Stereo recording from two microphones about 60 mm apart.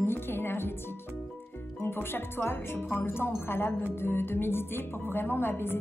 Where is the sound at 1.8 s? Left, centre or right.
Left.